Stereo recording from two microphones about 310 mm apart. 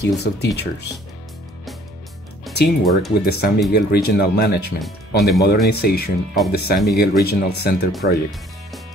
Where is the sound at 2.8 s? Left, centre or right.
Centre.